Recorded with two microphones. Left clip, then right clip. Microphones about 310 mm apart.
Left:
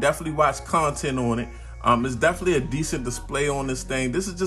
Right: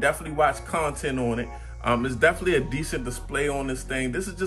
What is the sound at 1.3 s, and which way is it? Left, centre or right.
Speech, centre.